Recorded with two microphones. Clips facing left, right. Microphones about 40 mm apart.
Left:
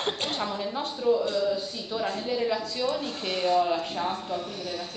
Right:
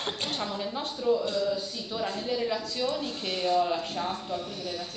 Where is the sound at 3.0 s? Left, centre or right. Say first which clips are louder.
Left 2 dB; left.